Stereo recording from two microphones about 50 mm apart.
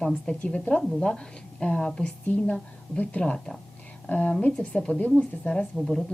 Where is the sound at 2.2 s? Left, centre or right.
Left.